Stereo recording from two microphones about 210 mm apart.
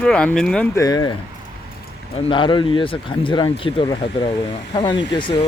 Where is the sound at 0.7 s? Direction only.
15° left (ahead or behind).